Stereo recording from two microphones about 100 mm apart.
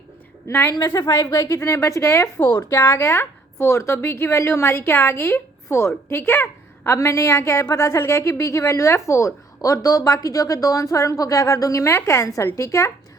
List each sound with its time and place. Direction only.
0.4 s a woman's voice: 25° left (ahead or behind)
0.7 s a woman's voice: 40° left (ahead or behind)